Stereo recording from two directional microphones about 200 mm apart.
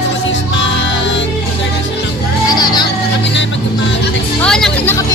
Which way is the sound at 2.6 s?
20° left (ahead or behind).